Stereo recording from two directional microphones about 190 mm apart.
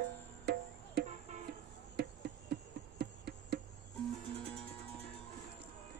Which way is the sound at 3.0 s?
60° right (ahead or behind).